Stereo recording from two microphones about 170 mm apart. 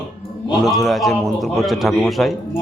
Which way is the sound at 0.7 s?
Centre (ahead or behind).